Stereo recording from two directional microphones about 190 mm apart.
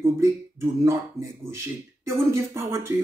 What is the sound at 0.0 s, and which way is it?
Speech, 15° right (ahead or behind).